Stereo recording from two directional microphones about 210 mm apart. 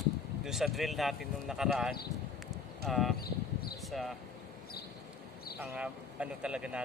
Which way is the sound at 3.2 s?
45° left (ahead or behind).